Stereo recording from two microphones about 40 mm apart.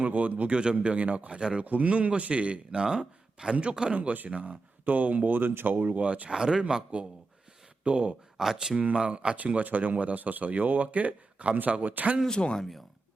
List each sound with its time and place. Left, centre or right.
0.0 s speech: right
0.5 s speech: right
1.4 s speech: right
1.6 s speech: right; by 3.5 s centre
3.5 s speech: right
6.3 s speech: centre
6.6 s speech: right
8.4 s speech: centre
9.0 s speech: right
9.4 s speech: right
12.3 s speech: left